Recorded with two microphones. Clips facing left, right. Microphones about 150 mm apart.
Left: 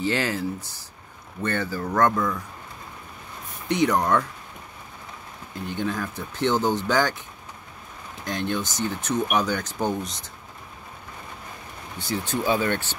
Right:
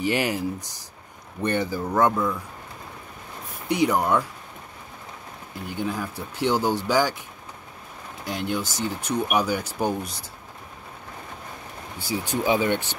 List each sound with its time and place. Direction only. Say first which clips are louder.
0.0 s speech: right 1 dB; 15° right (ahead or behind)
3.6 s speech: even; 10° right (ahead or behind)
5.7 s speech: left 1 dB; 10° right (ahead or behind)
8.3 s speech: even; 10° right (ahead or behind)
12.0 s speech: even; 10° right (ahead or behind)